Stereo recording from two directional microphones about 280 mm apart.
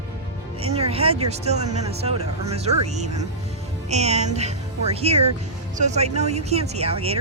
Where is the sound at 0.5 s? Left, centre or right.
Right.